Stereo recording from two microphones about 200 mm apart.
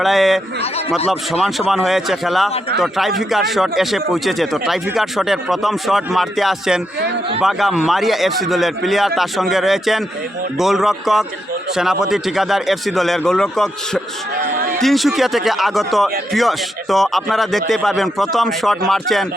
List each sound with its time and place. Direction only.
0.0 s speech: centre (ahead or behind)
0.6 s speech: 30° left (ahead or behind)
1.3 s speech: centre (ahead or behind)
14.5 s a sound: 50° right (ahead or behind)
14.8 s speech: centre (ahead or behind)